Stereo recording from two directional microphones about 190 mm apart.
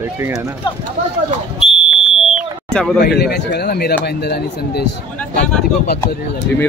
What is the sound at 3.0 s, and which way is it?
Speech, 60° left (ahead or behind).